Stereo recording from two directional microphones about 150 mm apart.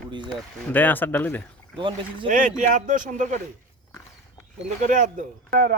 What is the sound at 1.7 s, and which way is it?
Speech, 35° right (ahead or behind).